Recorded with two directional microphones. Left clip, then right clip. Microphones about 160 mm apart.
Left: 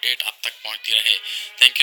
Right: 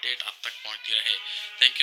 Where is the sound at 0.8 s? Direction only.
30° left (ahead or behind).